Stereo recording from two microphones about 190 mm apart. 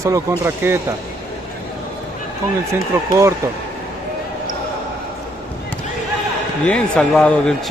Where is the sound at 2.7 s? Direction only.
15° right (ahead or behind).